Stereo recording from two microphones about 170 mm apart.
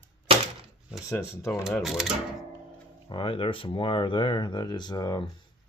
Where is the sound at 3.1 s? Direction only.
30° left (ahead or behind).